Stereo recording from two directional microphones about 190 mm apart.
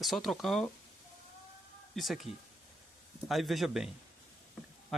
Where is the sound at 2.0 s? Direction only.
Centre (ahead or behind).